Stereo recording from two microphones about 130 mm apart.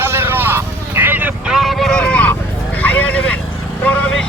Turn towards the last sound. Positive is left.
turn(degrees=10)  # may be behind; listen again after turning